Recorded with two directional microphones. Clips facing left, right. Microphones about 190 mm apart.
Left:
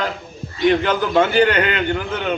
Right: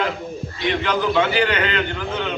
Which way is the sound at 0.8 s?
45° left (ahead or behind).